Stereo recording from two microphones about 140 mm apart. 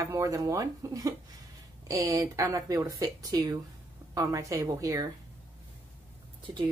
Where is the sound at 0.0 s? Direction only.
20° right (ahead or behind).